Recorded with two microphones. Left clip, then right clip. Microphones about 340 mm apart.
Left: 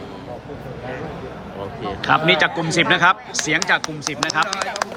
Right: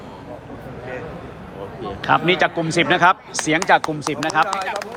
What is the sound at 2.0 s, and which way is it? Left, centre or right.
A man's voice, centre.